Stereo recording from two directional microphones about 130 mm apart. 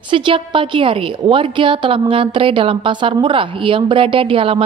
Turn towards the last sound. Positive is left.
turn(degrees=-45)  # may be behind; listen again after turning